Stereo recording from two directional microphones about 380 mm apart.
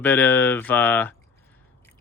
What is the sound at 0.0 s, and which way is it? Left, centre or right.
Speech, centre.